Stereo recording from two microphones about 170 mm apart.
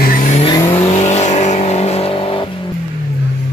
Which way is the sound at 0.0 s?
50° left (ahead or behind).